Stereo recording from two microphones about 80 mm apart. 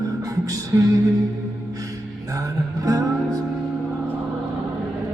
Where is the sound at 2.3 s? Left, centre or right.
Right.